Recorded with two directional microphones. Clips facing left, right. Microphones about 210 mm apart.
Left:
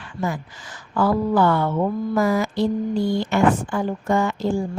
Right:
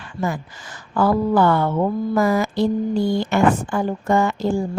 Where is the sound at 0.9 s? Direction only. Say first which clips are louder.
Right 2 dB; 45° right (ahead or behind).